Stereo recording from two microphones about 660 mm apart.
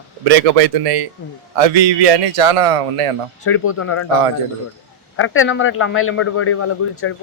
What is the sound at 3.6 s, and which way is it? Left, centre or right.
Speech, centre.